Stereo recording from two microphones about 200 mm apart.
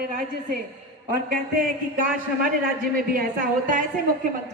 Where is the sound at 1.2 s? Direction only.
45° right (ahead or behind).